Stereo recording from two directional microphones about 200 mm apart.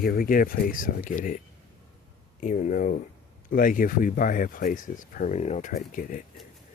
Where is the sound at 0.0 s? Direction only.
45° left (ahead or behind).